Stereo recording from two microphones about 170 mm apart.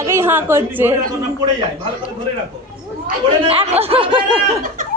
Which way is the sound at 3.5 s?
35° right (ahead or behind).